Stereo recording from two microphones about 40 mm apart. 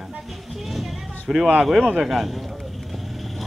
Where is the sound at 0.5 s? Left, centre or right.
Centre.